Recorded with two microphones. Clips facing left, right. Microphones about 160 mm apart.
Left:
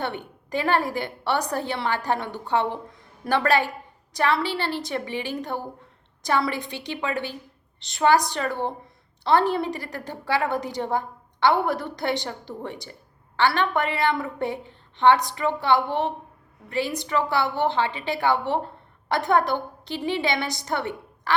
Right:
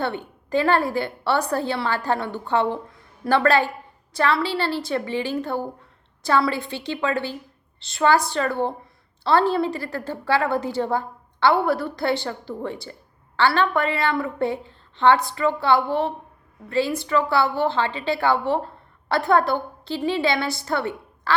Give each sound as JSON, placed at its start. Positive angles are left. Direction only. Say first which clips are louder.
{"t": 0.0, "sound": "a woman's voice", "louder": "right 3 dB", "side_deg": 15}